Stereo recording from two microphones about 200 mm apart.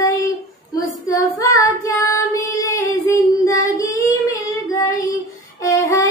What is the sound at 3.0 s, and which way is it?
Child singing, 15° left (ahead or behind).